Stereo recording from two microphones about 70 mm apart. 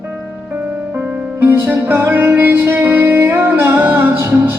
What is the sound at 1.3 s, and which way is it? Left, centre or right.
Music, right.